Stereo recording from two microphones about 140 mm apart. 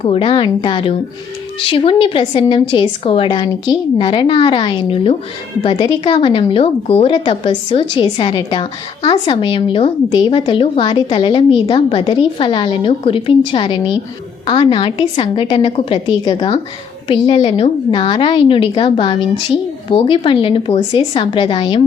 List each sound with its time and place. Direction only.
0.0 s speech: 40° left (ahead or behind)